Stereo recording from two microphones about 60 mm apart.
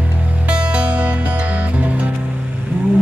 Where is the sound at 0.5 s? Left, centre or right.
Centre.